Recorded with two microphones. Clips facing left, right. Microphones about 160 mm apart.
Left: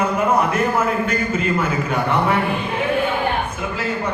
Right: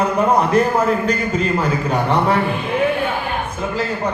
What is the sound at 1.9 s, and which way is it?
Speech, 35° right (ahead or behind).